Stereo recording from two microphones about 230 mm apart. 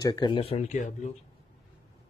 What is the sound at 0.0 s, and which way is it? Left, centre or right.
Speech, centre.